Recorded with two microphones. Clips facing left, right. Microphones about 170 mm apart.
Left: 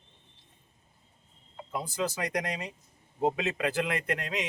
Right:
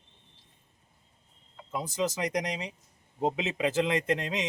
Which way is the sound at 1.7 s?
20° right (ahead or behind).